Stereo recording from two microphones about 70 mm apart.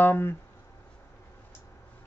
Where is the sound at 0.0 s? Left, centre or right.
Left.